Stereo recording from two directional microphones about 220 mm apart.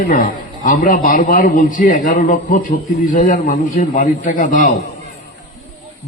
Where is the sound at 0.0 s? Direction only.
40° left (ahead or behind).